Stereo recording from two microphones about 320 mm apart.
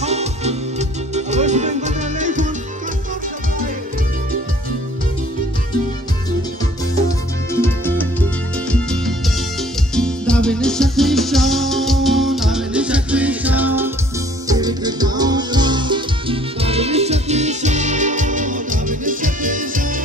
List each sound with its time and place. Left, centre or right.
0.0 s music: centre
7.6 s music: centre; by 20.0 s right